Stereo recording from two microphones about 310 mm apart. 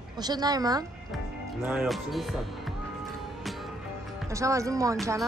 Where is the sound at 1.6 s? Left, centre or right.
Centre.